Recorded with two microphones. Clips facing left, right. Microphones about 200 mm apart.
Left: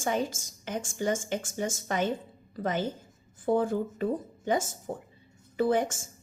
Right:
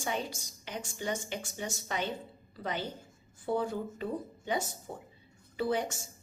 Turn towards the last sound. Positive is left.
turn(degrees=50)  # may be behind; listen again after turning